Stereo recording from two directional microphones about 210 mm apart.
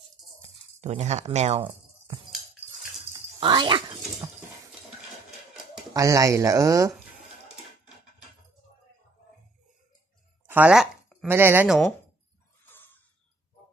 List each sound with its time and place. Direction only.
0.7 s speech: 30° right (ahead or behind)
3.1 s speech: 20° right (ahead or behind)
5.9 s speech: 15° right (ahead or behind)
10.5 s a sound: 5° right (ahead or behind)
11.2 s speech: 10° right (ahead or behind)
12.6 s a sound: 10° left (ahead or behind)